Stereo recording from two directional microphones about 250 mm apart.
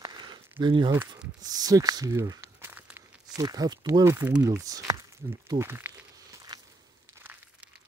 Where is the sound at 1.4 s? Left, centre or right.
Centre.